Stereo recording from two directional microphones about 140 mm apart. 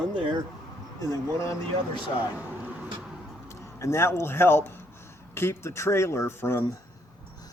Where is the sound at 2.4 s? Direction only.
10° right (ahead or behind).